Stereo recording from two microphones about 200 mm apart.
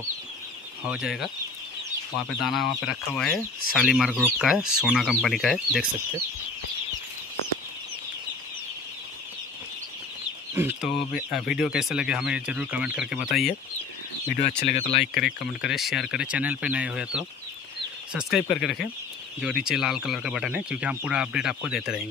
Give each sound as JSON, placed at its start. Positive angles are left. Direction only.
{"t": 0.8, "sound": "speech", "side_deg": -5}
{"t": 2.4, "sound": "speech", "side_deg": 0}
{"t": 10.5, "sound": "chicken", "side_deg": -10}
{"t": 11.2, "sound": "speech", "side_deg": 0}
{"t": 14.7, "sound": "speech", "side_deg": 30}
{"t": 15.2, "sound": "speech", "side_deg": 0}